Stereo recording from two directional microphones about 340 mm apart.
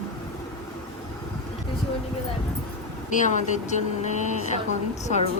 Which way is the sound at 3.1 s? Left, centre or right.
Left.